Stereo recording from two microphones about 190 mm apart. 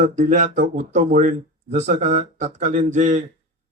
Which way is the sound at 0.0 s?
40° right (ahead or behind).